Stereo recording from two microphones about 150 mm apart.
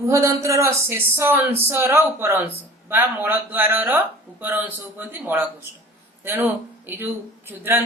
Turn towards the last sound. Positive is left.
turn(degrees=-15)  # may be behind; listen again after turning